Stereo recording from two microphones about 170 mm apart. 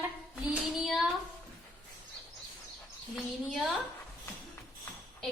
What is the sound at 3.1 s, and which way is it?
Speech, centre (ahead or behind).